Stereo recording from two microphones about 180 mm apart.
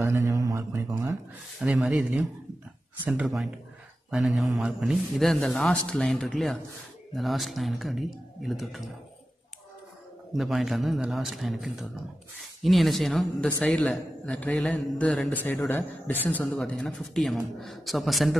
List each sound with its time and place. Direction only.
0.0 s a sound: 15° right (ahead or behind)
1.6 s a woman's voice: centre (ahead or behind)
10.3 s a woman's voice: centre (ahead or behind)